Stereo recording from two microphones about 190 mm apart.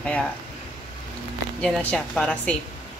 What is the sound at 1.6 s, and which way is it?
Speech, 5° left (ahead or behind).